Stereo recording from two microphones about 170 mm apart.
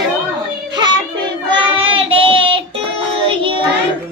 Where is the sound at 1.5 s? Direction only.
30° right (ahead or behind).